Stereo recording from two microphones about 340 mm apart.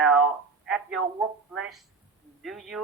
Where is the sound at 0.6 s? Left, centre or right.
Centre.